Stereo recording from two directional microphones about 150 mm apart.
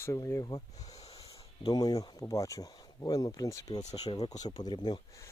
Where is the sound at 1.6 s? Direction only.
25° left (ahead or behind).